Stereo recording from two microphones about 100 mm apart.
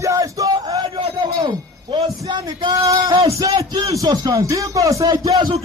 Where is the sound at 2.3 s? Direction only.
50° right (ahead or behind).